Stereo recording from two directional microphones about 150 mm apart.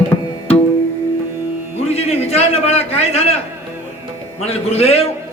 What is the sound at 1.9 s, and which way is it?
A man's voice, 45° left (ahead or behind).